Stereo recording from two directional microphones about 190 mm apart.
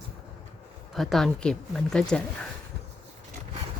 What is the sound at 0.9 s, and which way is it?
Speech, centre (ahead or behind).